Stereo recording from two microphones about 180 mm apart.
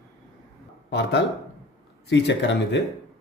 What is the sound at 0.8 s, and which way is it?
Speech, 70° left (ahead or behind).